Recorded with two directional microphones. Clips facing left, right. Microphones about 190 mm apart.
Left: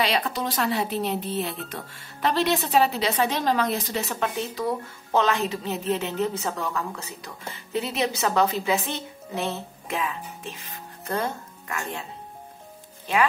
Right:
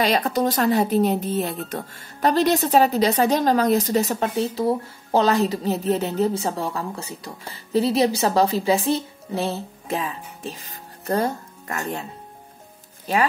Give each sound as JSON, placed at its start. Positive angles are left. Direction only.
{"t": 0.0, "sound": "speech", "side_deg": -45}
{"t": 13.1, "sound": "speech", "side_deg": -40}